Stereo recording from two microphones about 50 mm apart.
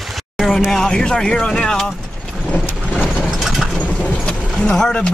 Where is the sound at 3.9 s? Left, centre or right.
Left.